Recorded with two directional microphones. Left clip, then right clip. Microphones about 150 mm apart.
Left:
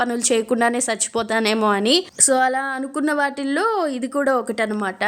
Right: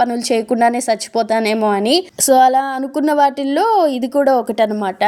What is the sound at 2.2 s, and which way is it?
A woman's voice, 25° right (ahead or behind).